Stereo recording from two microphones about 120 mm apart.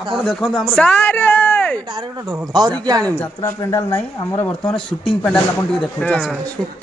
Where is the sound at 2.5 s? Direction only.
35° right (ahead or behind).